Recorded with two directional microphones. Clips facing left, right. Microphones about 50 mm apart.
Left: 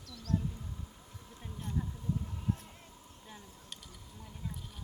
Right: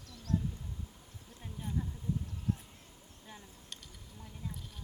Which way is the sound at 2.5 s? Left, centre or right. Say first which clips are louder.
Even; left.